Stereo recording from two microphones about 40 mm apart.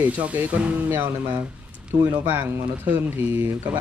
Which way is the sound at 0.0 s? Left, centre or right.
Right.